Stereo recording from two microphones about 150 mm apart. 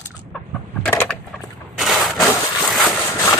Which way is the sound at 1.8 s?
Centre (ahead or behind).